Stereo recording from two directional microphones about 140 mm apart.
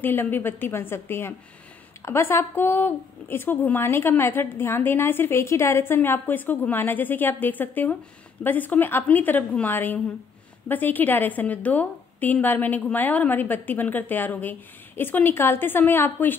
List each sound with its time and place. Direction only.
0.0 s speech: 15° left (ahead or behind)